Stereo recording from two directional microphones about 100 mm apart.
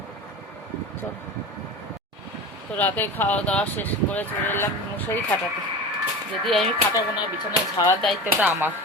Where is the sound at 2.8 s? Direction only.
20° left (ahead or behind).